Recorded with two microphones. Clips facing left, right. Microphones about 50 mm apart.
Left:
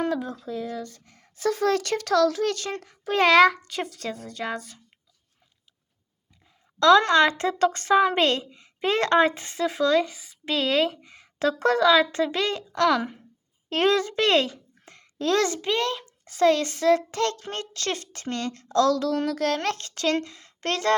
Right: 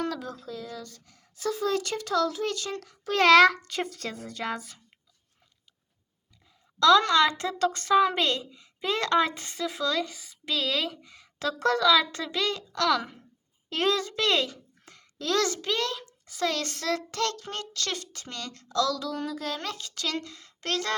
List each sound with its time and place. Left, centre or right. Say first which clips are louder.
0.0 s speech: left 5 dB; left
2.6 s a woman's voice: left 2 dB; left
3.0 s a child's voice: left 1 dB; centre
6.7 s a woman's voice: left 3 dB; left
9.3 s speech: left 6 dB; left
10.4 s a woman's voice: left 6 dB; left
13.7 s a child's voice: left 5 dB; left
16.5 s a woman's voice: left 11 dB; left
19.1 s speech: left 8 dB; left
20.2 s a woman's voice: left 1 dB; centre
20.6 s speech: left 5 dB; left